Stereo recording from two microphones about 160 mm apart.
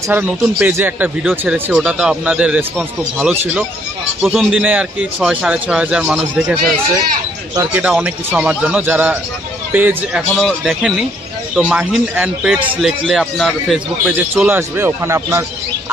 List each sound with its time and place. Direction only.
0.1 s a man's voice: 10° right (ahead or behind)
7.7 s a man's voice: 10° right (ahead or behind)
10.3 s a man's voice: centre (ahead or behind)
14.3 s a man's voice: 15° right (ahead or behind)